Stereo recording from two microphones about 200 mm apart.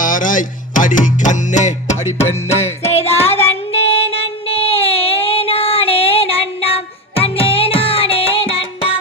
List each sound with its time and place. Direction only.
0.0 s music: 40° left (ahead or behind)
2.9 s child singing: 30° left (ahead or behind)